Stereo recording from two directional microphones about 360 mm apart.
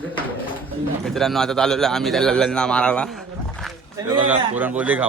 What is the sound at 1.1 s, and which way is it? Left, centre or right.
Speech, centre.